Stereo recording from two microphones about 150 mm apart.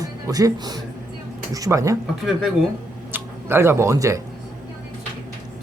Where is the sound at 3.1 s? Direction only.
15° right (ahead or behind).